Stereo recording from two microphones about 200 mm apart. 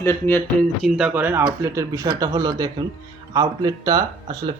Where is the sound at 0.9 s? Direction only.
5° right (ahead or behind).